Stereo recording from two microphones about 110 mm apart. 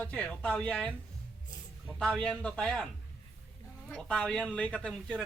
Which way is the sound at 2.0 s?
10° left (ahead or behind).